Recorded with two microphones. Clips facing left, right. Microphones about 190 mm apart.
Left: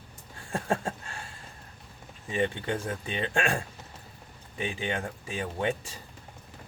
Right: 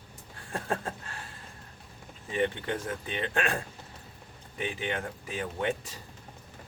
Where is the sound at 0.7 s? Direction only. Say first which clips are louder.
Left 3 dB; 25° left (ahead or behind).